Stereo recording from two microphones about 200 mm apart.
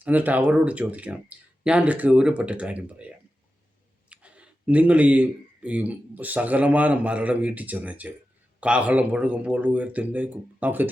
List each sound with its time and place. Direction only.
0.0 s speech: 10° right (ahead or behind)
4.1 s speech: 5° right (ahead or behind)